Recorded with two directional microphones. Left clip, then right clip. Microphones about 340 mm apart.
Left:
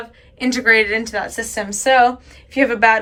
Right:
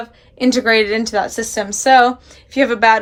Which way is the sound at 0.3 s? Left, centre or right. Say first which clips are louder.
Right 1 dB; centre.